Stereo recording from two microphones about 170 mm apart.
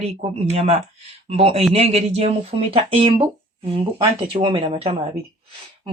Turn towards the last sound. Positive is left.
turn(degrees=-30)  # may be behind; listen again after turning